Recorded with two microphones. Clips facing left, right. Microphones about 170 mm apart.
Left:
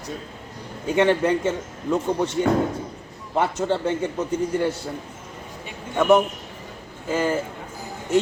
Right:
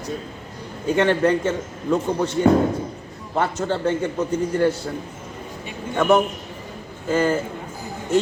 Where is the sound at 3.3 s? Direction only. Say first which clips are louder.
Even; 15° left (ahead or behind).